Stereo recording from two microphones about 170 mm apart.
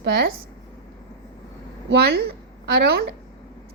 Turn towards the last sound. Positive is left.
turn(degrees=-65)  # may be behind; listen again after turning